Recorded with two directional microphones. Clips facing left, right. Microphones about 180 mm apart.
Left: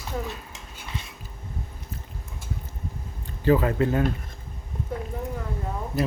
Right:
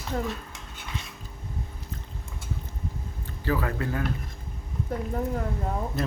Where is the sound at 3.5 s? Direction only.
20° left (ahead or behind).